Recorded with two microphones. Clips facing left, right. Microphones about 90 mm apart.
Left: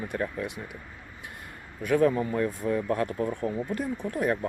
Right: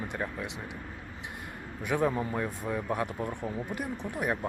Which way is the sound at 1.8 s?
15° right (ahead or behind).